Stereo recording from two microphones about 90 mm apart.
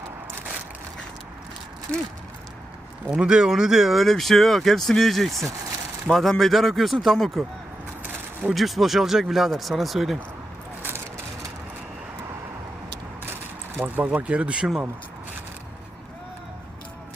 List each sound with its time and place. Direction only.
3.1 s speech: 10° right (ahead or behind)
8.4 s speech: centre (ahead or behind)
13.2 s speech: 25° right (ahead or behind)